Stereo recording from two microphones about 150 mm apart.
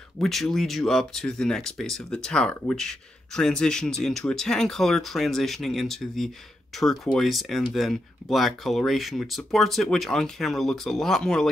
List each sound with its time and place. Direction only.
0.2 s speech: centre (ahead or behind)